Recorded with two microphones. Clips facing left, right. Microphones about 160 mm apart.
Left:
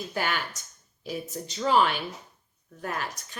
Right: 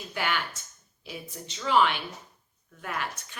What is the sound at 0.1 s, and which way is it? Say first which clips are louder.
A woman's voice: right 1 dB; 40° left (ahead or behind).